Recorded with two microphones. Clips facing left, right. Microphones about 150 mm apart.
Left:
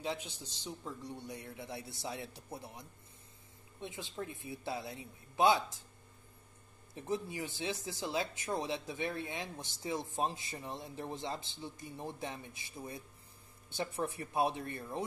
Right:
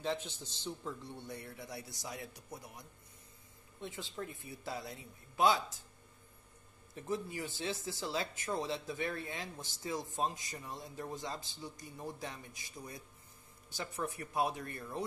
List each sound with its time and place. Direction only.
0.0 s a man's voice: 10° left (ahead or behind)
3.8 s speech: 20° left (ahead or behind)
7.0 s speech: 20° left (ahead or behind)